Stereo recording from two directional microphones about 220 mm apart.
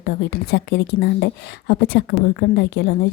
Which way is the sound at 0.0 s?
50° left (ahead or behind).